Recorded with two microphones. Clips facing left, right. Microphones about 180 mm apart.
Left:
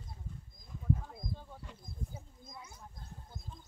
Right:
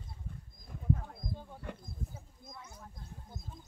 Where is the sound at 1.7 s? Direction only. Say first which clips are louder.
Right 9 dB; 60° right (ahead or behind).